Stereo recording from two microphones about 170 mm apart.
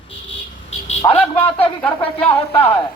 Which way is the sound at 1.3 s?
10° left (ahead or behind).